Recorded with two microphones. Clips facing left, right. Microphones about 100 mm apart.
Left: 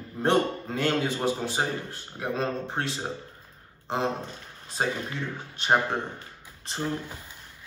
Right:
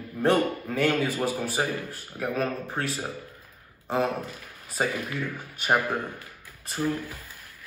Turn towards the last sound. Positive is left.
turn(degrees=25)  # may be behind; listen again after turning